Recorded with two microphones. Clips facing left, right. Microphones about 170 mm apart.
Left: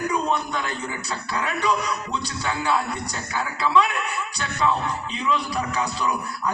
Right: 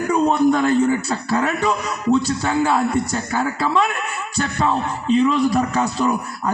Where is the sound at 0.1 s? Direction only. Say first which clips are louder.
Right 9 dB; 45° right (ahead or behind).